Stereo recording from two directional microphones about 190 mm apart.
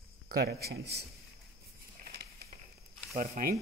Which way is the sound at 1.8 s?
50° right (ahead or behind).